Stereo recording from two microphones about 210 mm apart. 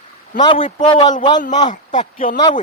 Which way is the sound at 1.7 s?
35° left (ahead or behind).